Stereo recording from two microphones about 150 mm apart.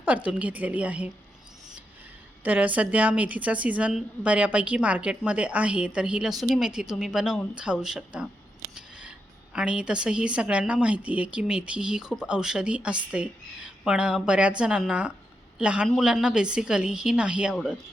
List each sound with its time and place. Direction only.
0.3 s a woman's voice: 10° right (ahead or behind)
2.4 s a woman's voice: 10° right (ahead or behind)